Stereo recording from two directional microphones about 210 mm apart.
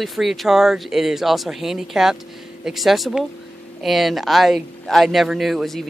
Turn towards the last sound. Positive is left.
turn(degrees=0)  # may be behind; listen again after turning